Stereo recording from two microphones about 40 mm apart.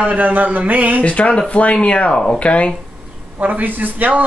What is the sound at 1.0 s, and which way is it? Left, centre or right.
Speech, left.